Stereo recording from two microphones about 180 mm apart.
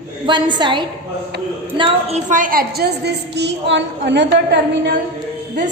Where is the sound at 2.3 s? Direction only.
50° right (ahead or behind); by 4.9 s 75° right (ahead or behind).